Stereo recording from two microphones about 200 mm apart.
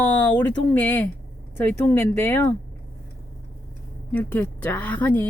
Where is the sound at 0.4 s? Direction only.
10° left (ahead or behind).